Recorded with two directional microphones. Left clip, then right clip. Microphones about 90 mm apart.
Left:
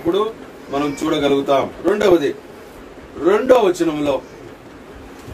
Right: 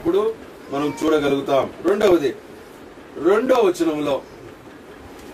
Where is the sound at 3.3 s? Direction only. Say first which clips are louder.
Left 3 dB; centre (ahead or behind).